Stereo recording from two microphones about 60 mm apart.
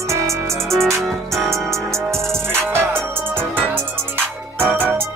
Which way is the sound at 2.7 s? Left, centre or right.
Right.